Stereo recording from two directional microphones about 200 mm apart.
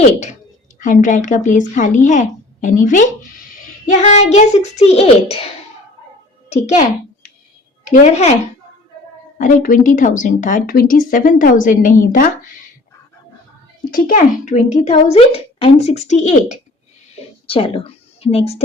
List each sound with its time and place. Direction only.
0.8 s speech: 40° left (ahead or behind)
7.9 s speech: 35° left (ahead or behind)
9.4 s speech: 40° left (ahead or behind)
13.9 s speech: 40° left (ahead or behind)
17.2 s a sound: 30° left (ahead or behind)